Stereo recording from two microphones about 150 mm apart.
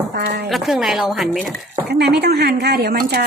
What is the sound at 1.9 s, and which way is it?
Speech, 90° right.